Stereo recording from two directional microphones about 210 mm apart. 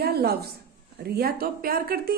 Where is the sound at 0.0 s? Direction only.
50° right (ahead or behind).